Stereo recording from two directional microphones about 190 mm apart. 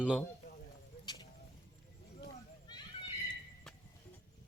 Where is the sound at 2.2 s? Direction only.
20° left (ahead or behind).